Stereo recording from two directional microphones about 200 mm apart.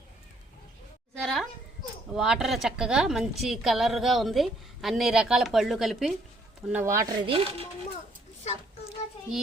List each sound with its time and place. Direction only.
1.2 s a sound: centre (ahead or behind)
2.1 s a woman's voice: centre (ahead or behind)
7.3 s speech: 30° right (ahead or behind)